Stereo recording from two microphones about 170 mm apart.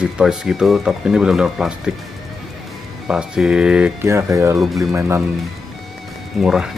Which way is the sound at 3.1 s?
5° right (ahead or behind).